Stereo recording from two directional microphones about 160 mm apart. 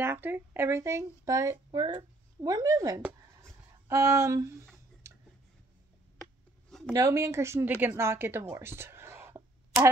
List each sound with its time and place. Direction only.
0.0 s speech: 15° right (ahead or behind)
6.9 s a woman's voice: 20° right (ahead or behind)